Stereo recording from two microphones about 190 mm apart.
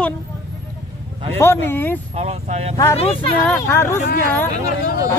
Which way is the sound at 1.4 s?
10° left (ahead or behind).